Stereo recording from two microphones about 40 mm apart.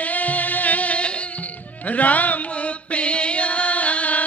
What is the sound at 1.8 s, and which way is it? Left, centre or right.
Music, left.